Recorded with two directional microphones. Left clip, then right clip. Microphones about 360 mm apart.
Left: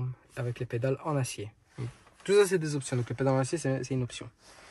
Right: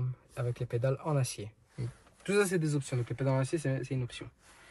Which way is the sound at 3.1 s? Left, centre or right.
Left.